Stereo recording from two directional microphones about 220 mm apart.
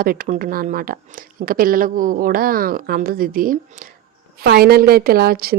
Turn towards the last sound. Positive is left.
turn(degrees=-45)  # may be behind; listen again after turning